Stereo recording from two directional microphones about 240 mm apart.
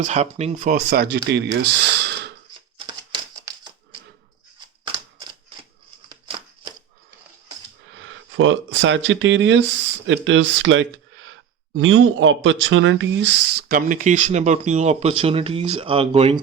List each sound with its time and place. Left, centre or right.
0.0 s speech: right
7.9 s speech: right